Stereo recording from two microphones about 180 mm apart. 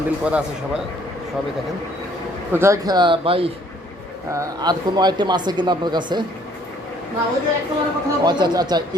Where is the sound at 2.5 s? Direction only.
15° right (ahead or behind); by 3.5 s 30° right (ahead or behind).